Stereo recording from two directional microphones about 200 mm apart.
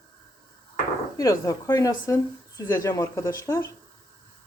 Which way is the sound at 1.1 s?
15° left (ahead or behind).